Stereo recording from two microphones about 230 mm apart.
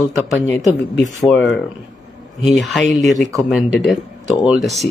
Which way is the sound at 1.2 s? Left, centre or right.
Centre.